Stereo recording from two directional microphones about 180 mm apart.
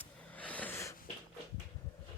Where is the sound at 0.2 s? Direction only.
10° left (ahead or behind).